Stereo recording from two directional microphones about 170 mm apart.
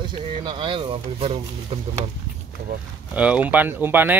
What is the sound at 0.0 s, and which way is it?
Speech, 25° right (ahead or behind).